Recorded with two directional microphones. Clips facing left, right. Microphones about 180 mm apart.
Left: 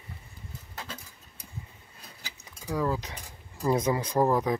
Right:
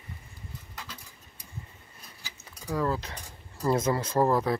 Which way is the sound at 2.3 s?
10° left (ahead or behind).